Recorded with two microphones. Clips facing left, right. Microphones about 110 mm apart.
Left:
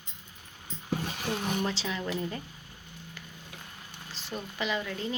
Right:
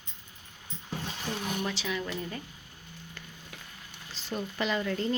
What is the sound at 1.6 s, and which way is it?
Speech, 30° left (ahead or behind).